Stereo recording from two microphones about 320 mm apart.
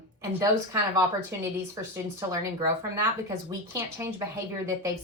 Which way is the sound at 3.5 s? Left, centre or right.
Centre.